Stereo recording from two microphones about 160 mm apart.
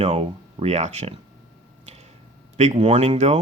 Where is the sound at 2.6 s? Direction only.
40° right (ahead or behind).